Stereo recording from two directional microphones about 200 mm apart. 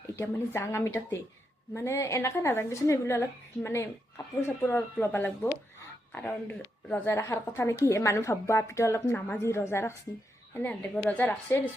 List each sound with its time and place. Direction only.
0.2 s a woman's voice: 15° left (ahead or behind)